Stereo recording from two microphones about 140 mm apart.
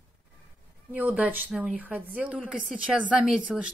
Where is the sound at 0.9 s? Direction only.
10° right (ahead or behind).